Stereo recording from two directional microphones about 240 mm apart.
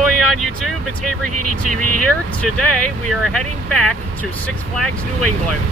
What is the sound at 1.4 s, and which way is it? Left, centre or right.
Speech, right.